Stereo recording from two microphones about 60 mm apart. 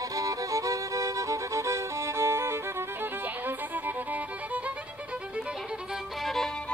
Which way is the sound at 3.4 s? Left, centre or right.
Right.